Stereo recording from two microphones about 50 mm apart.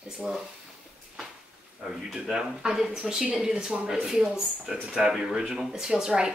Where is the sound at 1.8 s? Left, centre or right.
Centre.